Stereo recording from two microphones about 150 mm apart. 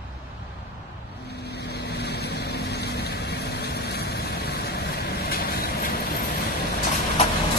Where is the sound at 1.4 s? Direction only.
90° left.